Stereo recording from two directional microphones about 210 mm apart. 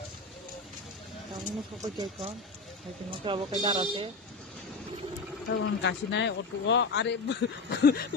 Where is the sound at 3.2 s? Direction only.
25° right (ahead or behind).